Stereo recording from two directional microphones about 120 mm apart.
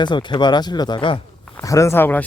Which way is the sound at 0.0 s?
40° left (ahead or behind).